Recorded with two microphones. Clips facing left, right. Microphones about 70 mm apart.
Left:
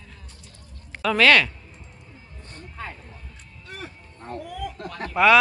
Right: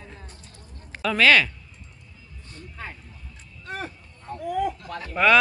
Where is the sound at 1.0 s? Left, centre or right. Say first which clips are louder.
Left 1 dB; centre.